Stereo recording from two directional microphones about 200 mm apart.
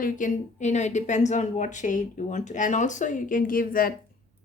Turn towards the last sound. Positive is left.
turn(degrees=45)  # may be behind; listen again after turning